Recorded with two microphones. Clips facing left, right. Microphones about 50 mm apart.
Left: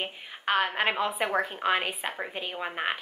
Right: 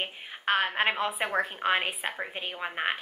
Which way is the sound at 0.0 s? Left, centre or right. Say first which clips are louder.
Even; centre.